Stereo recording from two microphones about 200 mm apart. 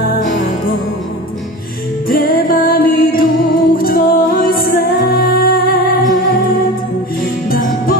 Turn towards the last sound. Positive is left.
turn(degrees=45)  # may be behind; listen again after turning